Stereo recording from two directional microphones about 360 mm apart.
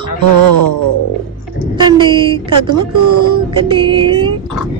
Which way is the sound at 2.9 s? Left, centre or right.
Right.